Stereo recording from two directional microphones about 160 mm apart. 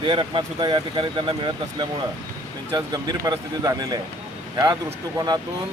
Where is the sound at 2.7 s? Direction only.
25° right (ahead or behind).